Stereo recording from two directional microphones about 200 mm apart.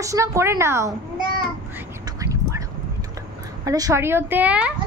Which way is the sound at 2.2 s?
15° right (ahead or behind).